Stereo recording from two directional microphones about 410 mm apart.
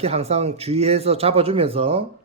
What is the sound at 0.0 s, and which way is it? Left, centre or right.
Speech, centre.